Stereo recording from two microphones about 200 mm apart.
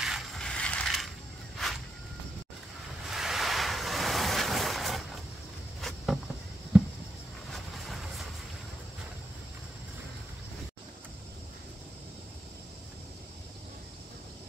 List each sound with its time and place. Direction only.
0.0 s mechanisms: centre (ahead or behind)
3.1 s a sound: centre (ahead or behind)
7.5 s vehicle: centre (ahead or behind)